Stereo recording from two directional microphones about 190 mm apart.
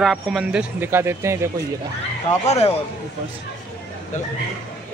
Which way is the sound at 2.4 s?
35° left (ahead or behind).